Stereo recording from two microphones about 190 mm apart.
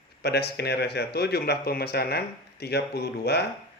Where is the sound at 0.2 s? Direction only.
60° left (ahead or behind).